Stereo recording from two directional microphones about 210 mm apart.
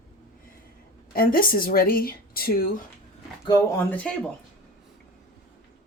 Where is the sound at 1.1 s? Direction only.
45° left (ahead or behind).